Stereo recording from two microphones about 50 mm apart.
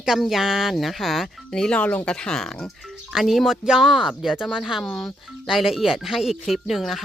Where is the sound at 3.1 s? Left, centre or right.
Centre.